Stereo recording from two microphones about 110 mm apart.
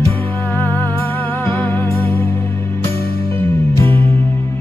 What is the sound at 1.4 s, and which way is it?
Music, 20° left (ahead or behind).